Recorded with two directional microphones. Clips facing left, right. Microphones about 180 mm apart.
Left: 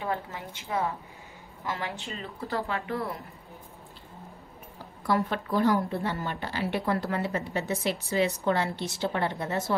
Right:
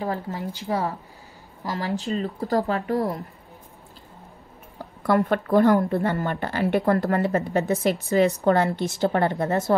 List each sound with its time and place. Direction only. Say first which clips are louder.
0.0 s speech: right 5 dB; 35° right (ahead or behind)
5.0 s speech: right 6 dB; 55° right (ahead or behind)